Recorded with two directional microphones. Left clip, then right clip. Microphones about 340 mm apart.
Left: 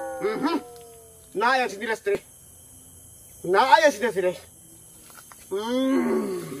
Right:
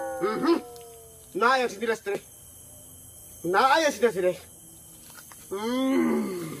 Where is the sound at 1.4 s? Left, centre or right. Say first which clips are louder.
Left 1 dB; centre.